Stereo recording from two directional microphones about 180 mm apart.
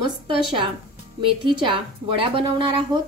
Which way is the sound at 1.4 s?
25° right (ahead or behind).